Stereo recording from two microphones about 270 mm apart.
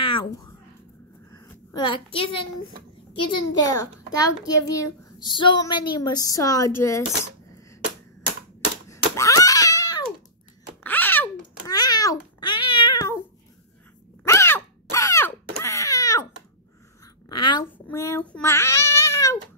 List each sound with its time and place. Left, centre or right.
0.0 s a sound: centre
2.1 s a woman's voice: centre
8.8 s cat: centre
10.8 s babbling: centre
12.5 s cat: left
14.2 s a sound: centre
17.3 s babbling: centre